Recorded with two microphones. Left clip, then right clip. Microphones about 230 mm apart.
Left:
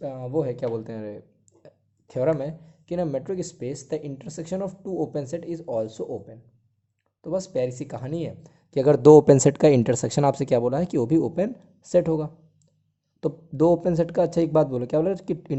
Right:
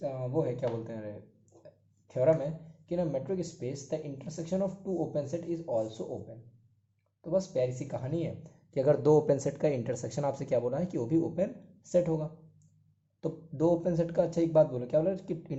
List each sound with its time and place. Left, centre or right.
0.0 s speech: left